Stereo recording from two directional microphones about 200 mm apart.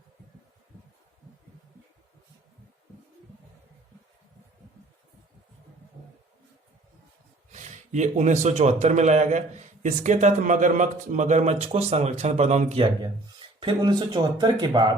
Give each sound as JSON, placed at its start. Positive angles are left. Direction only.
{"t": 7.5, "sound": "a man's voice", "side_deg": -35}